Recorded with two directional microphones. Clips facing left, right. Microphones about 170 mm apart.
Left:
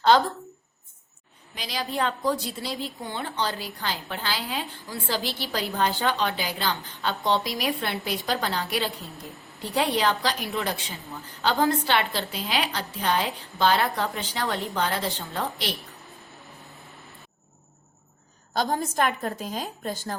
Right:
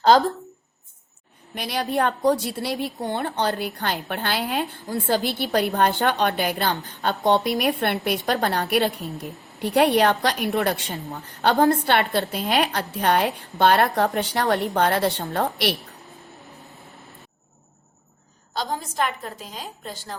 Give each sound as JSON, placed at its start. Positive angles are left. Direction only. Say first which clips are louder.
{"t": 0.1, "sound": "speech", "louder": "right 3 dB", "side_deg": -40}
{"t": 1.5, "sound": "a woman's voice", "louder": "right 5 dB", "side_deg": -60}
{"t": 18.5, "sound": "a woman's voice", "louder": "left 2 dB", "side_deg": 50}